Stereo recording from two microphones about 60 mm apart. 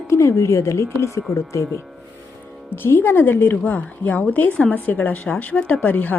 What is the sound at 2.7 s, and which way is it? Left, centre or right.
A woman's voice, left.